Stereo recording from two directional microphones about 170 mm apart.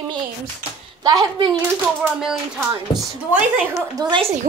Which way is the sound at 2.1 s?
5° right (ahead or behind).